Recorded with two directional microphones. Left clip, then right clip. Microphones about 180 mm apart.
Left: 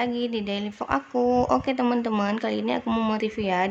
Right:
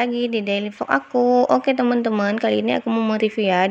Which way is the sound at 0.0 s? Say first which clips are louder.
Right 6 dB; 15° right (ahead or behind).